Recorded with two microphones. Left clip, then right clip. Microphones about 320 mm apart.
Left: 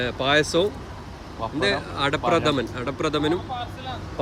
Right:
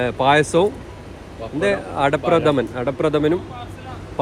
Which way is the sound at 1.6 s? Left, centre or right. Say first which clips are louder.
Right 5 dB; centre.